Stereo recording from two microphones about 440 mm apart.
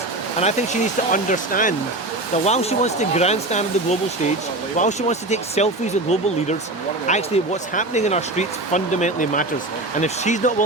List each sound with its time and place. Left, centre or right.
0.3 s speech: centre